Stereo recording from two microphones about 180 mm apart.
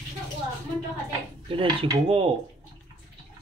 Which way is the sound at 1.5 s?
30° right (ahead or behind).